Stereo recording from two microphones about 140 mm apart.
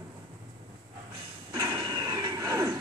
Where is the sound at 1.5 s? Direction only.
25° right (ahead or behind).